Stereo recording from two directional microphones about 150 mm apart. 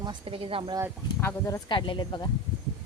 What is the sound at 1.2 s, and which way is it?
Speech, 15° left (ahead or behind).